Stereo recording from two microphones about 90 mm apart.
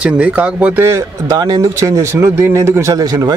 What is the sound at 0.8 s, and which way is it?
A man's voice, 30° right (ahead or behind).